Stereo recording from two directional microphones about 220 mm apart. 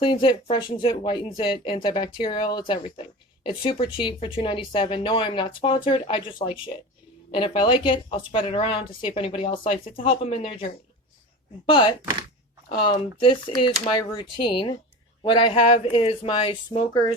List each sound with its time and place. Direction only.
0.0 s speech: 20° left (ahead or behind)